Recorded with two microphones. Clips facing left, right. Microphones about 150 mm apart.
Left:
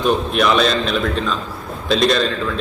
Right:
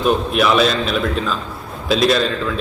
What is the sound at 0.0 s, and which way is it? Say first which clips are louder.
A man's voice: right 1 dB; 5° right (ahead or behind).